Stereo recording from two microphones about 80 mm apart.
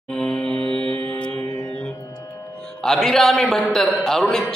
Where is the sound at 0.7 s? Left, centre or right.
Right.